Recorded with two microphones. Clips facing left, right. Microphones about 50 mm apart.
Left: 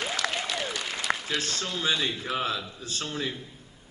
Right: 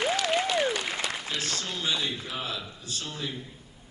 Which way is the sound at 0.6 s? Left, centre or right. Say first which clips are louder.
Right 5 dB; right.